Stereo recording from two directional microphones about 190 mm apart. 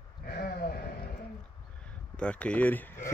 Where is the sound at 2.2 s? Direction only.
5° left (ahead or behind).